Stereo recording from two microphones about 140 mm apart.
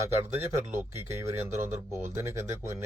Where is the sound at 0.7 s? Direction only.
20° right (ahead or behind).